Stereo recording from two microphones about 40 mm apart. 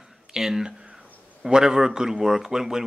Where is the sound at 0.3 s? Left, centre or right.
Centre.